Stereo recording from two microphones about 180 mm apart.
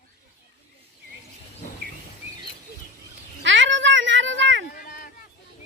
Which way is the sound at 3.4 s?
90° right.